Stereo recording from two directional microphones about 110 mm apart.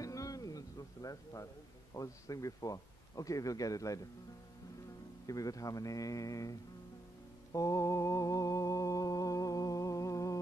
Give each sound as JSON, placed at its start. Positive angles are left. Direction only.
{"t": 0.0, "sound": "music", "side_deg": 30}
{"t": 2.0, "sound": "speech", "side_deg": 30}
{"t": 5.2, "sound": "speech", "side_deg": 30}
{"t": 7.5, "sound": "mantra", "side_deg": 30}